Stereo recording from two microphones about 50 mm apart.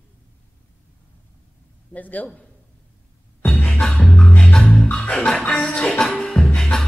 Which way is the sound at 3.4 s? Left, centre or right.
Left.